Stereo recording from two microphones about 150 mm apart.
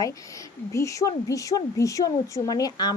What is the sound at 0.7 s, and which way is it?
A woman's voice, 20° left (ahead or behind).